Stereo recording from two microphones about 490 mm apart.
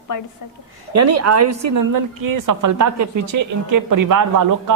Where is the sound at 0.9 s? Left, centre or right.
Right.